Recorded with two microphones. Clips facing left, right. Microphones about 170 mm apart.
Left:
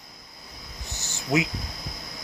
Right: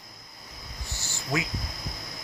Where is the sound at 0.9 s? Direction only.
20° left (ahead or behind).